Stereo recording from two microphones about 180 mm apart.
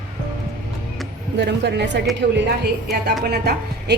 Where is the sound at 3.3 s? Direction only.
65° right (ahead or behind).